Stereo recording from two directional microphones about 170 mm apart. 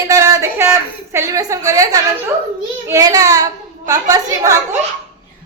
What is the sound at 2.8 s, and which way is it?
A woman's voice, 20° right (ahead or behind).